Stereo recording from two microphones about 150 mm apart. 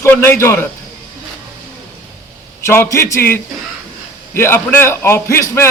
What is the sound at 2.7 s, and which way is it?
A man's voice, 15° left (ahead or behind).